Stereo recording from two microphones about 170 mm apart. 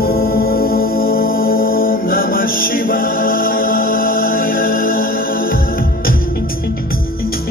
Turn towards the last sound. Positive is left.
turn(degrees=55)  # may be behind; listen again after turning